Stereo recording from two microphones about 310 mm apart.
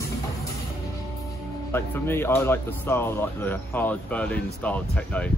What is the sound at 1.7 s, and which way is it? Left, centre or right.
Speech, centre.